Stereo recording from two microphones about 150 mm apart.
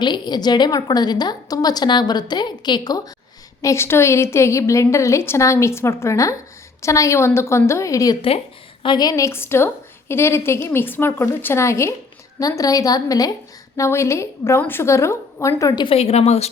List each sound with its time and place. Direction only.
0.0 s a woman's voice: 30° left (ahead or behind)
16.0 s a woman's voice: 45° left (ahead or behind)